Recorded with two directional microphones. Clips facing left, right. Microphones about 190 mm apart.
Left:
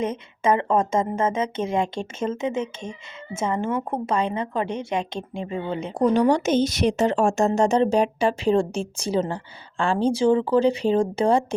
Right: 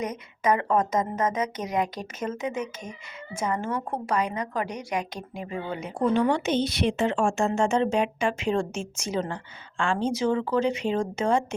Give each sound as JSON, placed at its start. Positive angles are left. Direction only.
{"t": 0.0, "sound": "speech", "side_deg": 25}
{"t": 6.0, "sound": "a woman's voice", "side_deg": 40}